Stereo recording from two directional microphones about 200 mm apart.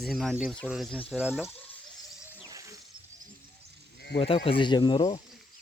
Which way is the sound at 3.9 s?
55° left (ahead or behind).